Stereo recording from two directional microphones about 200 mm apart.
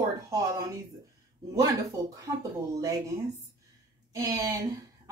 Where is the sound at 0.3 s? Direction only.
15° right (ahead or behind).